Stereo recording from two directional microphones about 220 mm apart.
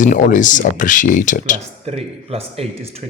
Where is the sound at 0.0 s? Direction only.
35° left (ahead or behind).